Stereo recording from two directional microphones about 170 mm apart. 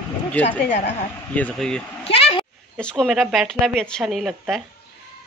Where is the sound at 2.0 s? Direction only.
35° left (ahead or behind).